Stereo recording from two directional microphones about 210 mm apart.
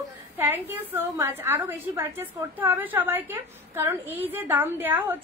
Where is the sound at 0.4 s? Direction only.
10° right (ahead or behind).